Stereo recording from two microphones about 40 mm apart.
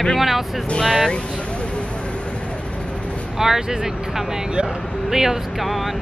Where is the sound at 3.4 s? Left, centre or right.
Centre.